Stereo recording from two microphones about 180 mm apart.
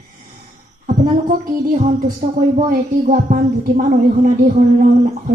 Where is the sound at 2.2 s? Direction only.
40° right (ahead or behind).